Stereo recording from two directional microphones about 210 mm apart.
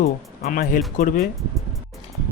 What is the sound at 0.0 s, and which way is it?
Speech, 45° left (ahead or behind).